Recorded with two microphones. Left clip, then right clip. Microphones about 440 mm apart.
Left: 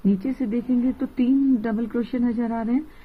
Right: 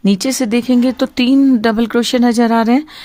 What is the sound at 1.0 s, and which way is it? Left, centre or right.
Speech, right.